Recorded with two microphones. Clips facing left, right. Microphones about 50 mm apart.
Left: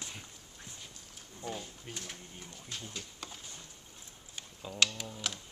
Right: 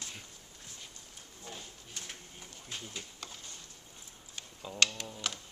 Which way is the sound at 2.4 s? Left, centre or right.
Centre.